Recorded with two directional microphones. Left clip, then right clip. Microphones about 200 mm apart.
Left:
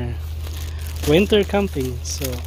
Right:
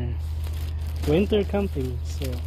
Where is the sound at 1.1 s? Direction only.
25° left (ahead or behind).